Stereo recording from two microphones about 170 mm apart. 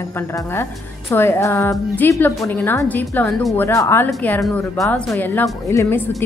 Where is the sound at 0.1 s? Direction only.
15° left (ahead or behind).